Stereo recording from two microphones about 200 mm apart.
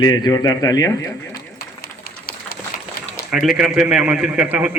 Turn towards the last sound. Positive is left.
turn(degrees=-5)  # may be behind; listen again after turning